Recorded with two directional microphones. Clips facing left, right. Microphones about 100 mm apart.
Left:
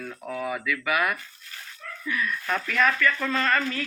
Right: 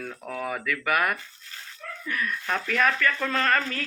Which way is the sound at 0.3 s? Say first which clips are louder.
Left 1 dB; 45° right (ahead or behind).